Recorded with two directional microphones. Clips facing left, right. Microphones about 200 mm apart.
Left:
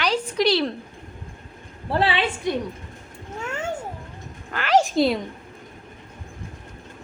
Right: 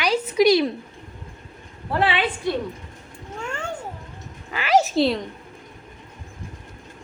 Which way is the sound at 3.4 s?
5° left (ahead or behind).